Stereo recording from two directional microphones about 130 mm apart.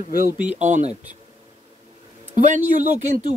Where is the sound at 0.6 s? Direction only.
65° right (ahead or behind).